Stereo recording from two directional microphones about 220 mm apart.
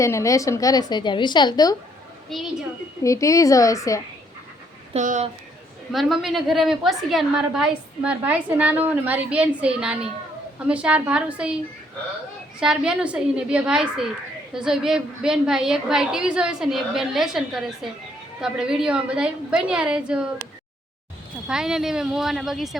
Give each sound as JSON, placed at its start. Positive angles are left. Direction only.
{"t": 0.0, "sound": "a woman's voice", "side_deg": 15}
{"t": 2.3, "sound": "a woman's voice", "side_deg": 0}
{"t": 3.0, "sound": "a woman's voice", "side_deg": 15}
{"t": 4.9, "sound": "speech", "side_deg": -35}
{"t": 5.9, "sound": "a woman's voice", "side_deg": 0}
{"t": 12.5, "sound": "a woman's voice", "side_deg": -5}